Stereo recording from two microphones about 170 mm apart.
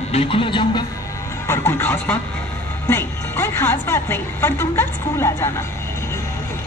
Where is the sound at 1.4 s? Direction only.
15° left (ahead or behind).